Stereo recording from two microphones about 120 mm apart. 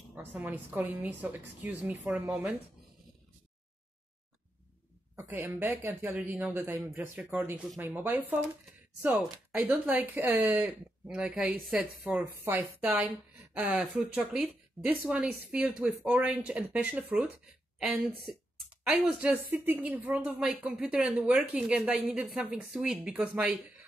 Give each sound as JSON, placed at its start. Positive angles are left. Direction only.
{"t": 0.1, "sound": "speech", "side_deg": -15}
{"t": 5.1, "sound": "speech", "side_deg": -20}
{"t": 12.0, "sound": "a woman's voice", "side_deg": -15}